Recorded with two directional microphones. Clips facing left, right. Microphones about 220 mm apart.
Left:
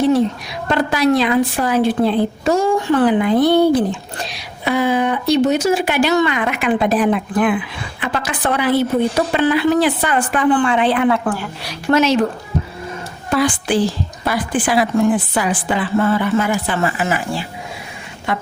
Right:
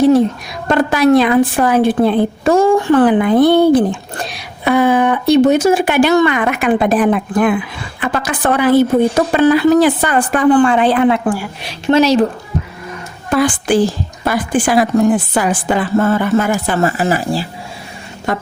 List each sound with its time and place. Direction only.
0.7 s a woman's voice: 50° right (ahead or behind)
11.1 s a woman's voice: 15° right (ahead or behind)
11.7 s speech: 30° right (ahead or behind)
13.3 s a woman's voice: 45° right (ahead or behind)